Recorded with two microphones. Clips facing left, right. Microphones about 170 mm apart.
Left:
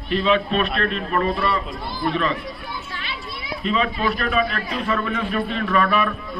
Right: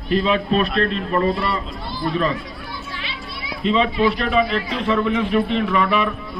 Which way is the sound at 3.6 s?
25° right (ahead or behind).